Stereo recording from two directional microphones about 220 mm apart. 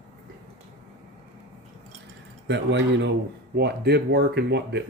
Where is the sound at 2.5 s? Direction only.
55° right (ahead or behind).